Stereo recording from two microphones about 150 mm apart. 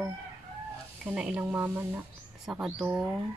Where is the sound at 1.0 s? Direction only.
5° right (ahead or behind).